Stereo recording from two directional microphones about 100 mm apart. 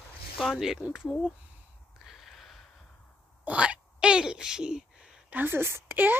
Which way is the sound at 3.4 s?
10° right (ahead or behind).